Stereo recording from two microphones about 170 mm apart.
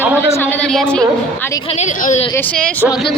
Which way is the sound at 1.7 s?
45° left (ahead or behind).